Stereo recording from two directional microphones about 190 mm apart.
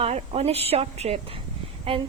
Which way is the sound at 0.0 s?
35° right (ahead or behind).